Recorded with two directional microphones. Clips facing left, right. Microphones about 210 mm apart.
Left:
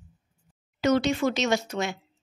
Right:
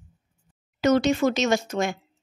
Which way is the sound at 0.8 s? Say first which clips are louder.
Right 3 dB; 45° right (ahead or behind).